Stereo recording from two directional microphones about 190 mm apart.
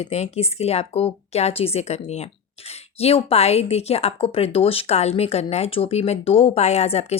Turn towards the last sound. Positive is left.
turn(degrees=35)  # may be behind; listen again after turning